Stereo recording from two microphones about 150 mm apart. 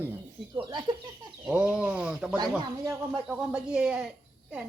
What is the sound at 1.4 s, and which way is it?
Speech, 5° right (ahead or behind).